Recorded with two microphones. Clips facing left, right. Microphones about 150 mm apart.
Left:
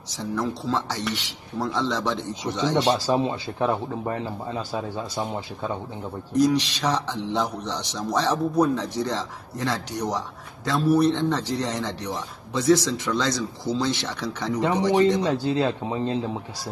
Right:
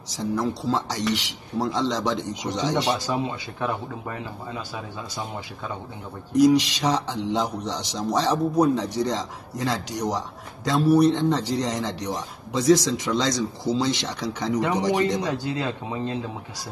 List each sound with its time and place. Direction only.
0.4 s speech: 10° right (ahead or behind)
3.1 s speech: 25° left (ahead or behind)
6.3 s speech: 10° right (ahead or behind)
15.0 s speech: 30° left (ahead or behind)